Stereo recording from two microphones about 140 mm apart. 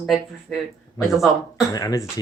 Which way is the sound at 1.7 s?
25° left (ahead or behind).